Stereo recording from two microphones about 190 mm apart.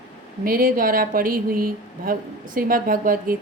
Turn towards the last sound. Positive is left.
turn(degrees=-50)  # may be behind; listen again after turning